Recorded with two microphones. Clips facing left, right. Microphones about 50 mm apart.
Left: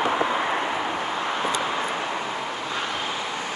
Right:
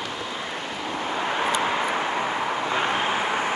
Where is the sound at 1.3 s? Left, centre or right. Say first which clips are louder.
Right 4 dB; centre.